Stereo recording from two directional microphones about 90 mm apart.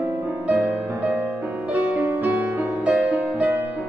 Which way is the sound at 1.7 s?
20° right (ahead or behind).